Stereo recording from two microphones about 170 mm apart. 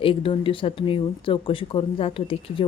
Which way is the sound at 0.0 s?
30° left (ahead or behind).